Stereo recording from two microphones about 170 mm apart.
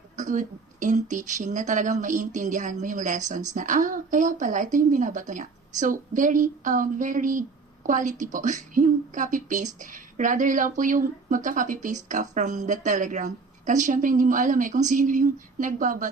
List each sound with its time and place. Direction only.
0.2 s a woman's voice: 50° right (ahead or behind)